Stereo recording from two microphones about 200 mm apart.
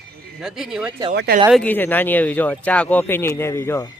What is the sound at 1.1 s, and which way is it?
Speech, 55° right (ahead or behind).